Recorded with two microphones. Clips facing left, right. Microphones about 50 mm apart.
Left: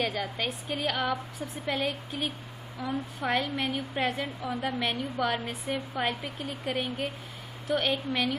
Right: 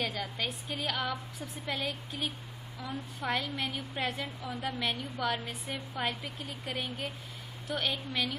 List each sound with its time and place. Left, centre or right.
0.0 s a woman's voice: centre